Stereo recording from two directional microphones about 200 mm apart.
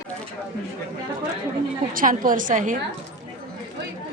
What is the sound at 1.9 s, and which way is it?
Speech, 40° right (ahead or behind).